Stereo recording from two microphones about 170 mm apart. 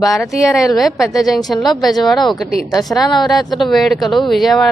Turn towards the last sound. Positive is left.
turn(degrees=0)  # may be behind; listen again after turning